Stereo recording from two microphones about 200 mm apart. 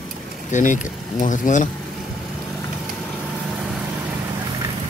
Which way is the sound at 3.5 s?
5° right (ahead or behind).